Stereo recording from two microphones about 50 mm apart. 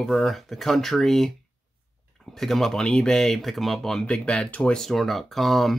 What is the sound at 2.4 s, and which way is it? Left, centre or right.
Speech, centre.